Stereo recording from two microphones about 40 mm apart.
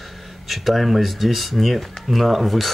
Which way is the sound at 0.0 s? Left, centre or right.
Centre.